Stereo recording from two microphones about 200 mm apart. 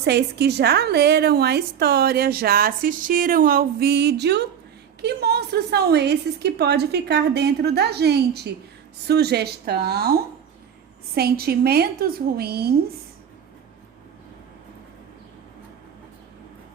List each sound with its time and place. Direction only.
0.0 s a woman's voice: 55° right (ahead or behind)